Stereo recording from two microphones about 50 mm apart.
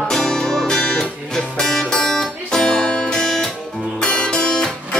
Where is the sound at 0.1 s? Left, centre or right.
Centre.